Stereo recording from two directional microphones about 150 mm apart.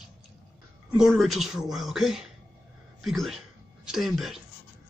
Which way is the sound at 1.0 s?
Centre (ahead or behind).